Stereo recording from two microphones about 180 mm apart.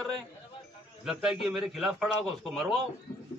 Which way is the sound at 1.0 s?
5° right (ahead or behind).